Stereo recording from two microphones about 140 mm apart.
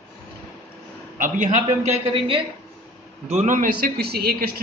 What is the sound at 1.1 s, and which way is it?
Speech, 70° right (ahead or behind).